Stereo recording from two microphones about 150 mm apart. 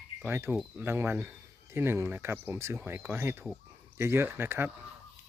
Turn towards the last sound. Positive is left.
turn(degrees=-15)  # may be behind; listen again after turning